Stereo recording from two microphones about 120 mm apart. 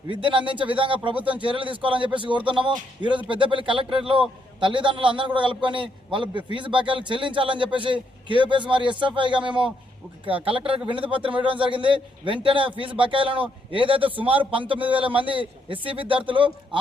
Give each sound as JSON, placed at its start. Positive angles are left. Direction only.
{"t": 0.1, "sound": "a man's voice", "side_deg": -45}